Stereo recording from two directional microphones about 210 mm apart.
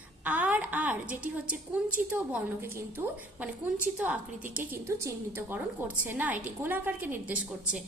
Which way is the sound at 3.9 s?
5° right (ahead or behind).